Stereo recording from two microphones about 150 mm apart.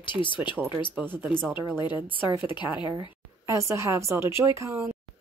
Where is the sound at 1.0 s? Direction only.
5° left (ahead or behind).